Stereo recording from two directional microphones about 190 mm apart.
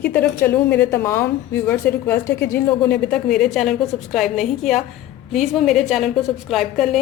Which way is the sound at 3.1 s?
5° left (ahead or behind).